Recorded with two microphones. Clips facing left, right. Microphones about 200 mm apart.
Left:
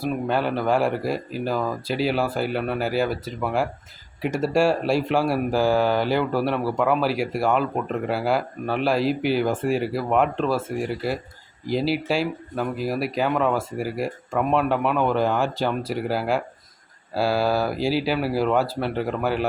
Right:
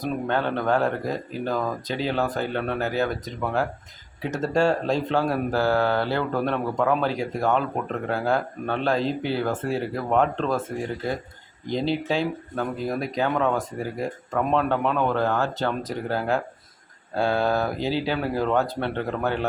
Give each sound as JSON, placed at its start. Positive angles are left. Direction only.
{"t": 0.0, "sound": "speech", "side_deg": 10}